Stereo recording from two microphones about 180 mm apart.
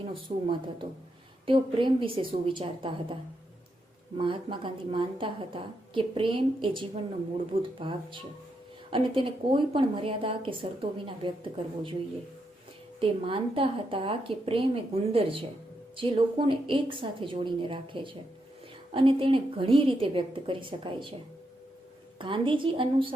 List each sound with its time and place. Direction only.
0.0 s a woman's voice: 30° right (ahead or behind)
4.2 s a woman's voice: 30° right (ahead or behind)
13.0 s a woman's voice: 30° right (ahead or behind)
22.2 s a woman's voice: 30° right (ahead or behind)